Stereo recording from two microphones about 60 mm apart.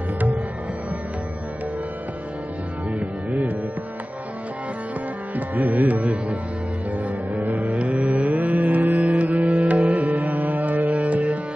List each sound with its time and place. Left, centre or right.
2.9 s music: right
5.3 s music: right
7.8 s music: centre